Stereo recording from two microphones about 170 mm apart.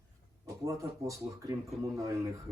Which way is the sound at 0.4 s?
20° right (ahead or behind).